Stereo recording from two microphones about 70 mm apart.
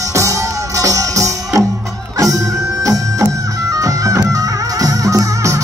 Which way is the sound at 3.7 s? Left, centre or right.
Right.